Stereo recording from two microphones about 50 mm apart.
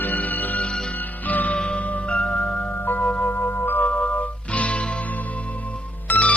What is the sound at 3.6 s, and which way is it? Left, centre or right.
Music, left.